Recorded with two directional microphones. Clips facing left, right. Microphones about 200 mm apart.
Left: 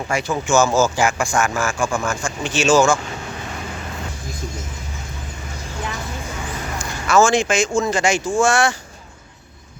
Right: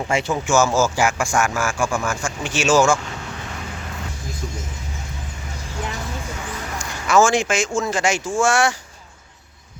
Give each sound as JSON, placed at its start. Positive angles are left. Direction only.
{"t": 0.1, "sound": "speech", "side_deg": -25}
{"t": 0.4, "sound": "speech", "side_deg": -5}
{"t": 6.7, "sound": "speech", "side_deg": -15}